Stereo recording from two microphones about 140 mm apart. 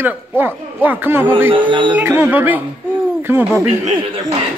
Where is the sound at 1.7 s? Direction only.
35° right (ahead or behind).